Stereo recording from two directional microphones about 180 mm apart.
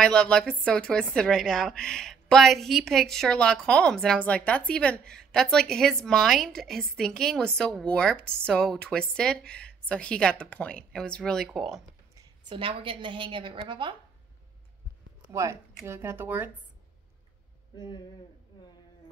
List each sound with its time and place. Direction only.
0.0 s speech: 5° left (ahead or behind)
12.4 s a woman's voice: 30° right (ahead or behind)
15.3 s speech: 15° right (ahead or behind)
17.7 s speech: 25° left (ahead or behind)